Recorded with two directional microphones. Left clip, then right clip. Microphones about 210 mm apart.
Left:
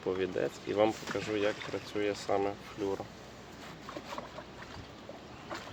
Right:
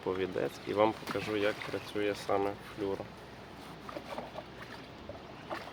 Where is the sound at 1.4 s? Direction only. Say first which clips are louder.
Even; 30° right (ahead or behind).